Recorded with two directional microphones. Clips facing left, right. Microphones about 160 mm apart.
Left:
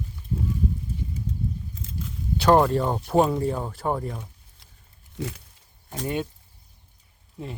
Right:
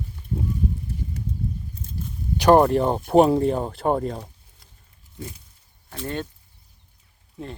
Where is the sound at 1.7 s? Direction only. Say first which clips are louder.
Right 1 dB; 90° left.